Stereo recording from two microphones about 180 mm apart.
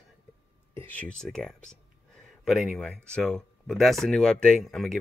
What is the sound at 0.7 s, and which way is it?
Speech, 10° left (ahead or behind).